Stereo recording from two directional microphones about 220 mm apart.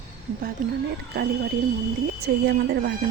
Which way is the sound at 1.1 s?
45° right (ahead or behind).